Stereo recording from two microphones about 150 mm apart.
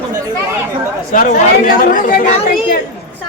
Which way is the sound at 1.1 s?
60° left (ahead or behind).